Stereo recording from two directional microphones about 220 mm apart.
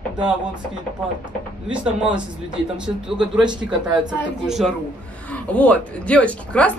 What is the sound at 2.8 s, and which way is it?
Speech, 5° right (ahead or behind).